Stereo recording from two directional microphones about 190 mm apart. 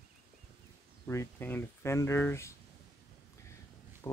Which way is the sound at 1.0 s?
10° left (ahead or behind).